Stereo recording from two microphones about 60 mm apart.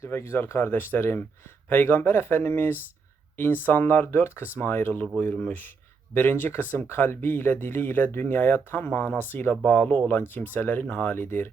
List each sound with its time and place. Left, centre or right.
0.1 s speech: left
0.6 s speech: left